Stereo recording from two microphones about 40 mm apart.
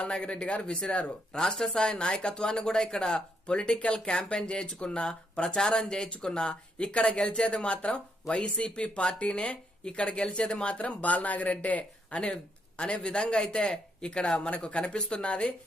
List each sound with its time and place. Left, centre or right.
0.0 s speech: left
12.2 s speech: left